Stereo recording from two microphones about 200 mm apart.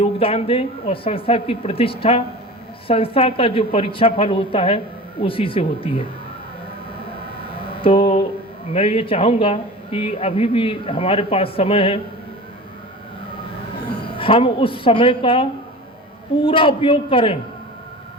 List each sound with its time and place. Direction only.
0.0 s speech: 30° left (ahead or behind)
7.0 s a sound: 25° left (ahead or behind)
8.7 s speech: 25° left (ahead or behind)
14.2 s speech: 25° left (ahead or behind)